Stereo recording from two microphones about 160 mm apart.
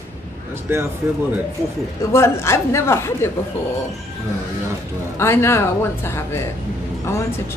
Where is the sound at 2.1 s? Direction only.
15° left (ahead or behind).